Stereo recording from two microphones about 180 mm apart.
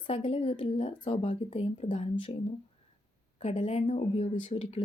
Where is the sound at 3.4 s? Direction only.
40° left (ahead or behind).